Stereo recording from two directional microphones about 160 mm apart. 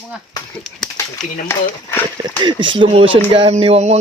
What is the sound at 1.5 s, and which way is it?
Speech, 15° left (ahead or behind).